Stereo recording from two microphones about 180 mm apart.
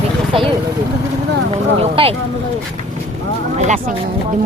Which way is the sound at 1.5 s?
35° right (ahead or behind).